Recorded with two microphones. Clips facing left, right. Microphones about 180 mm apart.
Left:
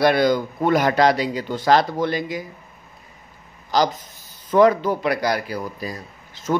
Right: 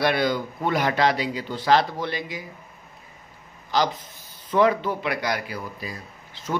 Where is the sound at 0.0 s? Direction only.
40° left (ahead or behind).